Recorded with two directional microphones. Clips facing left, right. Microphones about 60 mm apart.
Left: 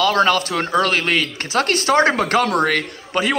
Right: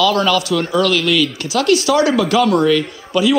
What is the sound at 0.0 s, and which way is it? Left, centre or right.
A man's voice, left.